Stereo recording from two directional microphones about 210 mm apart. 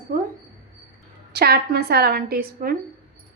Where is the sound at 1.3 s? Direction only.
50° right (ahead or behind).